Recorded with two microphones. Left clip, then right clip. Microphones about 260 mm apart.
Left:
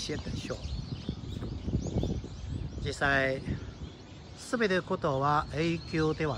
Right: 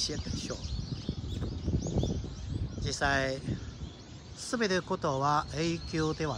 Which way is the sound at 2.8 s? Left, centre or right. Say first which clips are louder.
Left 2 dB; centre.